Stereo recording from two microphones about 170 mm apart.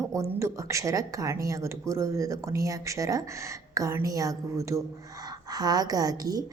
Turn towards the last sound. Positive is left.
turn(degrees=-20)  # may be behind; listen again after turning